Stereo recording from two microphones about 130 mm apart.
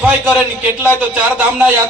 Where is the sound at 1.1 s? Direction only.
10° right (ahead or behind).